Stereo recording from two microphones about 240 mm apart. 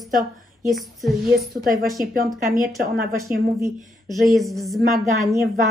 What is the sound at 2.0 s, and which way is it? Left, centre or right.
Speech, right.